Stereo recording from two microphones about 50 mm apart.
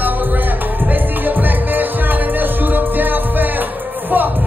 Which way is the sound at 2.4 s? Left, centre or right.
Right.